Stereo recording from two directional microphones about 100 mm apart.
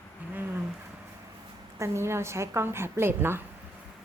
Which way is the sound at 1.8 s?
25° right (ahead or behind).